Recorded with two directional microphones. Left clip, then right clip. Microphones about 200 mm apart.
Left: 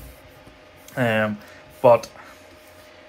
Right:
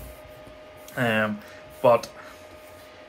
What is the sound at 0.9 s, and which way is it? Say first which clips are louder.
Speech: left 3 dB; 10° right (ahead or behind).